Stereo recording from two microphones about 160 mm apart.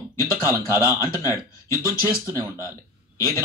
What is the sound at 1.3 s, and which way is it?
Speech, 20° left (ahead or behind).